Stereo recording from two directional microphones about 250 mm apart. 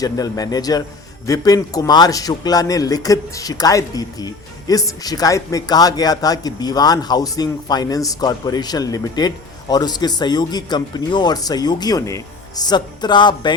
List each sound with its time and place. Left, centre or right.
0.0 s a man's voice: centre